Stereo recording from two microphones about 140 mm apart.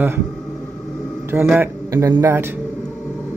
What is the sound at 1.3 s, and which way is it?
Speech, 15° right (ahead or behind).